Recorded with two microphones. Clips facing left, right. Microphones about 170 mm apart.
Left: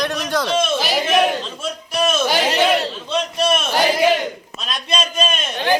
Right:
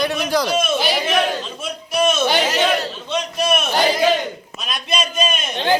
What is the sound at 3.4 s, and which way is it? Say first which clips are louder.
Crowd: even; 5° right (ahead or behind).